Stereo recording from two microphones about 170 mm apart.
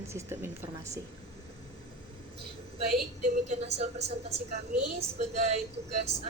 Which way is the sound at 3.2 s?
45° right (ahead or behind).